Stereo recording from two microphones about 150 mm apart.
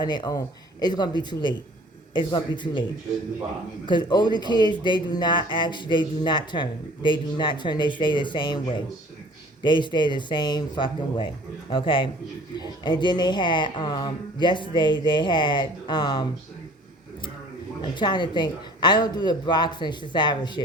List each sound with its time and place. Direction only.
0.0 s speech: 30° left (ahead or behind)
3.8 s speech: 30° left (ahead or behind)
17.9 s speech: 30° left (ahead or behind)